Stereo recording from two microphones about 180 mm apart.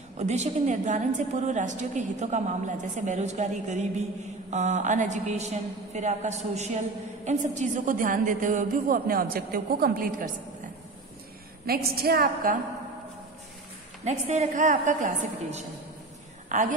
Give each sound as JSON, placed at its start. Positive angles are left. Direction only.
{"t": 0.2, "sound": "a woman's voice", "side_deg": -40}
{"t": 11.6, "sound": "a woman's voice", "side_deg": -60}
{"t": 14.0, "sound": "a woman's voice", "side_deg": -40}